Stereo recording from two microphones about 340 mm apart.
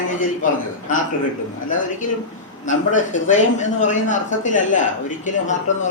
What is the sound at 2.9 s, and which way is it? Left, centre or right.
Speech, left.